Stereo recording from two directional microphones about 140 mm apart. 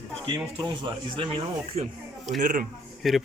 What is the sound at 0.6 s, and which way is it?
Speech, 40° right (ahead or behind).